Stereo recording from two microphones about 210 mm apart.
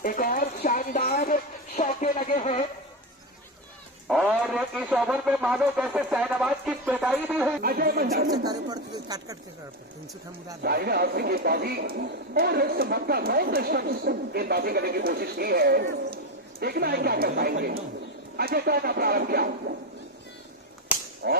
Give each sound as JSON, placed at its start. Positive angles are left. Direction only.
{"t": 0.0, "sound": "speech", "side_deg": 40}
{"t": 4.1, "sound": "speech", "side_deg": 0}
{"t": 7.6, "sound": "speech", "side_deg": -45}
{"t": 8.4, "sound": "speech", "side_deg": -20}
{"t": 10.6, "sound": "speech", "side_deg": -50}
{"t": 21.2, "sound": "speech", "side_deg": -50}